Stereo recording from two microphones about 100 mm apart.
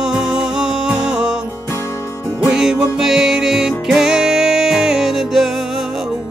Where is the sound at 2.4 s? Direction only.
5° right (ahead or behind).